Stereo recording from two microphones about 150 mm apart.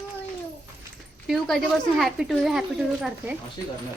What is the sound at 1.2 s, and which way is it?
Speech, centre (ahead or behind).